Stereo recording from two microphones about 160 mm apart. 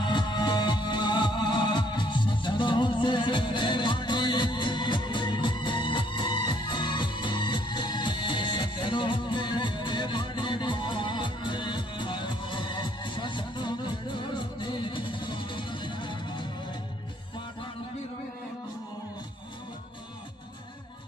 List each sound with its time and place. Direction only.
0.0 s music: 30° left (ahead or behind)